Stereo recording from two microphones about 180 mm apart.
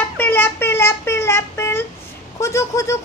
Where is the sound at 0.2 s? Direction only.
10° left (ahead or behind).